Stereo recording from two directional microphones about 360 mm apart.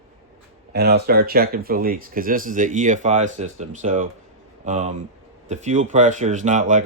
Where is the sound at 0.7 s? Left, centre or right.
Right.